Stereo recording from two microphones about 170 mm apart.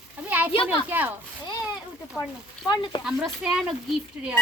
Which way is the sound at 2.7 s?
30° left (ahead or behind).